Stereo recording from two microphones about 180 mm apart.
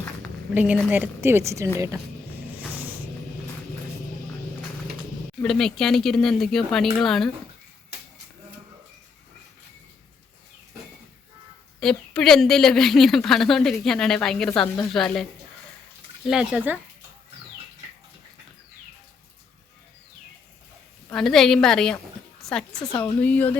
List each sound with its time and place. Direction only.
0.5 s a woman's voice: 10° right (ahead or behind)
5.4 s a woman's voice: centre (ahead or behind)
11.8 s a woman's voice: centre (ahead or behind)
21.1 s a woman's voice: centre (ahead or behind)
22.8 s speech: 20° left (ahead or behind)
23.2 s speech: 10° left (ahead or behind)